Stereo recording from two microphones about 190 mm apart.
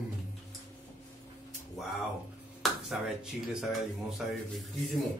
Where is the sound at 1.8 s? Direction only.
Centre (ahead or behind).